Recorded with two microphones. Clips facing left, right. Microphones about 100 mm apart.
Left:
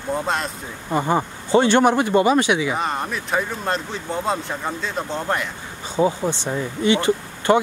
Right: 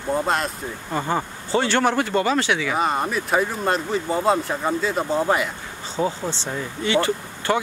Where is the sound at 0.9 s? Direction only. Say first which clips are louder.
Left 4 dB; 15° left (ahead or behind).